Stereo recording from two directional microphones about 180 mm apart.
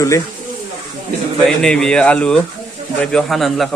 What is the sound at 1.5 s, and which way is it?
Speech, 5° left (ahead or behind).